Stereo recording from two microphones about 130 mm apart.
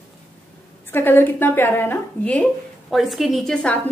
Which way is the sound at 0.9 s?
15° left (ahead or behind).